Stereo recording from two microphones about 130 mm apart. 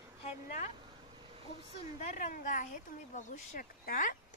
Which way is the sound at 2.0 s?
85° left.